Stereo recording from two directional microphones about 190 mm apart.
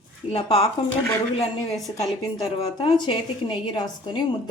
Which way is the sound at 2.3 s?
25° left (ahead or behind).